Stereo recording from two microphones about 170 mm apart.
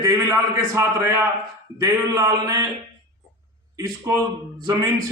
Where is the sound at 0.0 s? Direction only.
20° right (ahead or behind).